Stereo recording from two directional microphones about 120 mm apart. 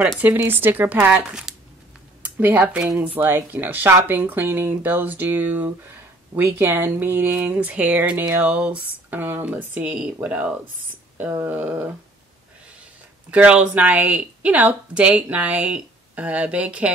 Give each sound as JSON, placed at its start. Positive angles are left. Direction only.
{"t": 0.2, "sound": "speech", "side_deg": -15}
{"t": 13.3, "sound": "speech", "side_deg": -10}